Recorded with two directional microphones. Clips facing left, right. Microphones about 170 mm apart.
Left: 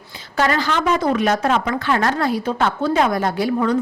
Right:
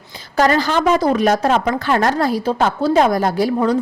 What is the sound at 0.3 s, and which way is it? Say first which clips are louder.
A woman's voice: right 4 dB; 40° right (ahead or behind).